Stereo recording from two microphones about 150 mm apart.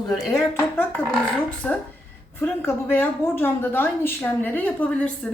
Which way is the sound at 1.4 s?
10° left (ahead or behind).